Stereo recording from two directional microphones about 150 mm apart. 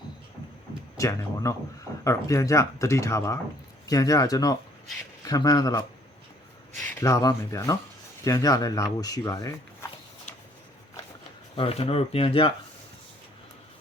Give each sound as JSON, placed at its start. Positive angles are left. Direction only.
{"t": 0.9, "sound": "speech", "side_deg": 20}
{"t": 7.0, "sound": "speech", "side_deg": 25}
{"t": 11.5, "sound": "speech", "side_deg": 40}